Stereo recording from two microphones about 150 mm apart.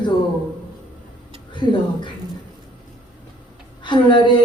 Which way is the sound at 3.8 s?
30° left (ahead or behind).